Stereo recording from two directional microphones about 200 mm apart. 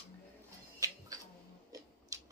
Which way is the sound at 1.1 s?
20° right (ahead or behind).